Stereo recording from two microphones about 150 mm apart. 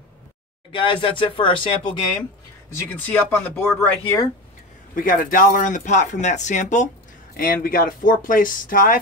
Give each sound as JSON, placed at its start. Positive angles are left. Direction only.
{"t": 0.7, "sound": "speech", "side_deg": 35}
{"t": 2.9, "sound": "speech", "side_deg": 10}
{"t": 4.9, "sound": "speech", "side_deg": 65}
{"t": 7.3, "sound": "speech", "side_deg": 70}